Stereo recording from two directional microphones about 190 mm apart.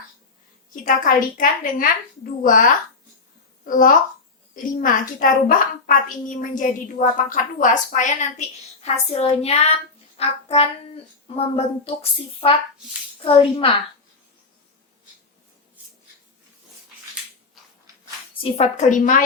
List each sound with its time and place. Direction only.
0.9 s a woman's voice: 45° left (ahead or behind); by 13.7 s 30° left (ahead or behind)
18.3 s a woman's voice: 35° left (ahead or behind)